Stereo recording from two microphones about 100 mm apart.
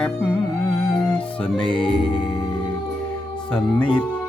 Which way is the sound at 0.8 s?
25° left (ahead or behind).